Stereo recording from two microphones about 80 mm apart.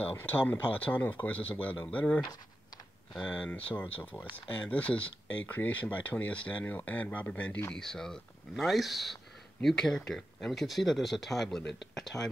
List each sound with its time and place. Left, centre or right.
0.2 s speech: left
3.3 s speech: centre
7.7 s speech: centre